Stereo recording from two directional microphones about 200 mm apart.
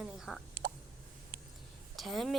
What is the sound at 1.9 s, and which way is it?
Speech, centre (ahead or behind).